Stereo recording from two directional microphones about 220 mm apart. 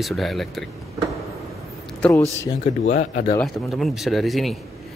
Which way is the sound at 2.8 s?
35° left (ahead or behind).